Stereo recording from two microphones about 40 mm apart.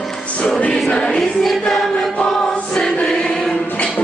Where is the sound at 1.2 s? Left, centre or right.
Centre.